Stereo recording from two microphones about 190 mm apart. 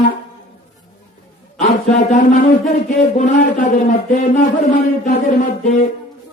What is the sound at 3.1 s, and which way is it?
Speech, 45° left (ahead or behind).